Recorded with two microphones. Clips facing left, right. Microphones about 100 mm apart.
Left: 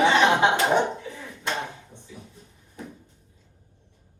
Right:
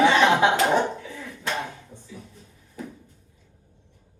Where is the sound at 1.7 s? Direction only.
20° left (ahead or behind).